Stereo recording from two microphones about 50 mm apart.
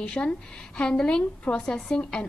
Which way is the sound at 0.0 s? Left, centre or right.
Centre.